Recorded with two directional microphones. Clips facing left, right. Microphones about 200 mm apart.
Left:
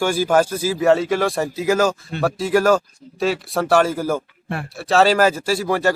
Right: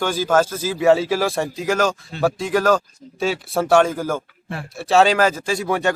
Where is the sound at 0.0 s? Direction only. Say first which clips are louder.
Left 1 dB; 10° left (ahead or behind).